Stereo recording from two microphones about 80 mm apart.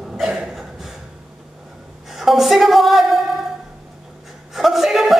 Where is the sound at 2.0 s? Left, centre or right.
Centre.